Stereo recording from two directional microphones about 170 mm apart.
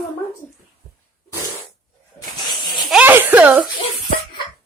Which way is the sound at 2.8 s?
5° right (ahead or behind).